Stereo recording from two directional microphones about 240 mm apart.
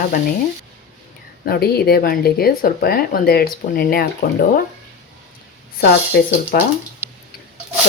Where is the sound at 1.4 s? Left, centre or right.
Left.